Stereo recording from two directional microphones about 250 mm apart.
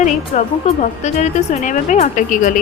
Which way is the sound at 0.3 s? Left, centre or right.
Left.